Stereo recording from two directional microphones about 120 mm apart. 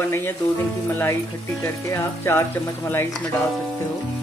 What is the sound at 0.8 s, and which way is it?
Speech, 20° left (ahead or behind).